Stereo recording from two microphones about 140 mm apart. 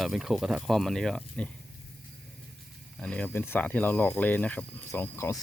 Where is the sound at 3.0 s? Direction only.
10° left (ahead or behind).